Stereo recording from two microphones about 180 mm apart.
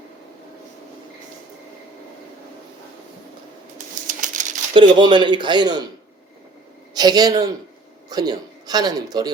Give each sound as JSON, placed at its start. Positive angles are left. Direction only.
{"t": 3.8, "sound": "typewriter", "side_deg": -45}
{"t": 4.7, "sound": "a man's voice", "side_deg": -25}
{"t": 6.9, "sound": "a man's voice", "side_deg": -20}